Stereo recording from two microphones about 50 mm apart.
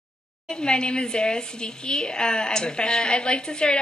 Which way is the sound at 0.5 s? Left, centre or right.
Centre.